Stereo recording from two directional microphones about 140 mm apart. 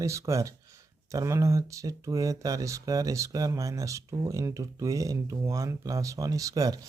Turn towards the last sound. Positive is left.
turn(degrees=-25)  # may be behind; listen again after turning